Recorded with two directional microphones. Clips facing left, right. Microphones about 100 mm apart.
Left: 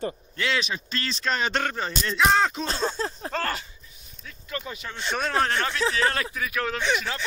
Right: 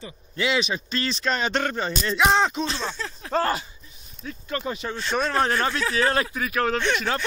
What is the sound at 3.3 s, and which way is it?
Speech, 20° right (ahead or behind).